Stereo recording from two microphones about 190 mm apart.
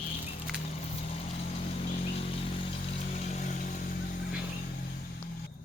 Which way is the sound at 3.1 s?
40° left (ahead or behind).